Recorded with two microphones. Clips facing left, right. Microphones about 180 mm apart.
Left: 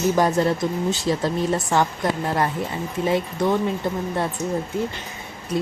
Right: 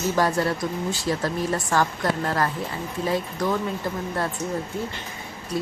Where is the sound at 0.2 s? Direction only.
20° left (ahead or behind).